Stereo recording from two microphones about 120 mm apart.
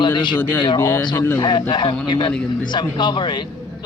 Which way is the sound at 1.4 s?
40° left (ahead or behind).